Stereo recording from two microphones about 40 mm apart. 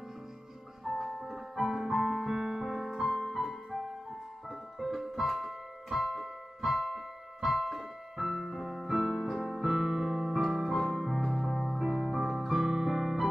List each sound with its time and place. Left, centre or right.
1.0 s music: centre
4.5 s keyboard: centre